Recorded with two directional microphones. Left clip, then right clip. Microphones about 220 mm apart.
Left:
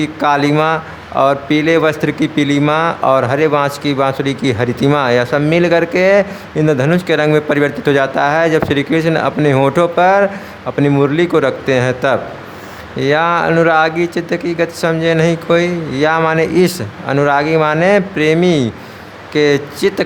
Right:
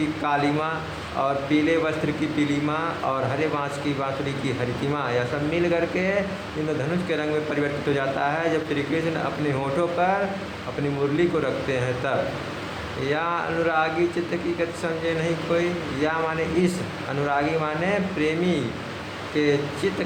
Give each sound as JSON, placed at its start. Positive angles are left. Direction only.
{"t": 0.2, "sound": "speech", "side_deg": 45}